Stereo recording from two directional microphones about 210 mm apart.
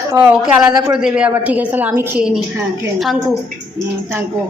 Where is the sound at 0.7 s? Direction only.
20° right (ahead or behind).